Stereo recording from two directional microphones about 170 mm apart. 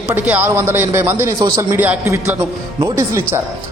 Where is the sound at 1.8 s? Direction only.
10° right (ahead or behind).